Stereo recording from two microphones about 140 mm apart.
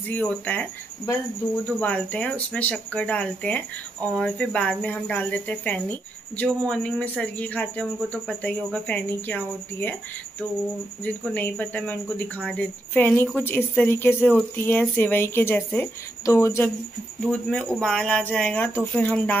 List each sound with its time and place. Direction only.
0.1 s speech: 10° left (ahead or behind)
11.1 s speech: 10° left (ahead or behind)
17.2 s speech: 5° left (ahead or behind)